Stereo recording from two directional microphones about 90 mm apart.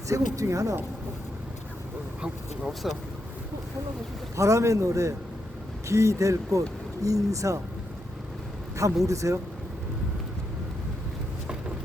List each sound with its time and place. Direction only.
0.1 s speech: 35° right (ahead or behind)
2.2 s speech: 5° right (ahead or behind)
4.4 s speech: 35° right (ahead or behind)
9.0 s speech: 35° right (ahead or behind)